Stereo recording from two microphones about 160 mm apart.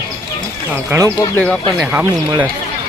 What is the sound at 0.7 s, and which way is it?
Speech, 15° right (ahead or behind).